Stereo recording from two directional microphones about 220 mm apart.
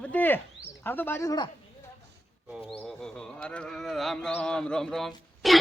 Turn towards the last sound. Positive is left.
turn(degrees=0)  # may be behind; listen again after turning